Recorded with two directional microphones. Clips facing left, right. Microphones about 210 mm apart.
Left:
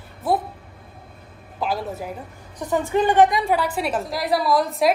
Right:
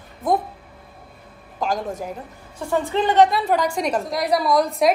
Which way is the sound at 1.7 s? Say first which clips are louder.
Right 1 dB; 5° left (ahead or behind).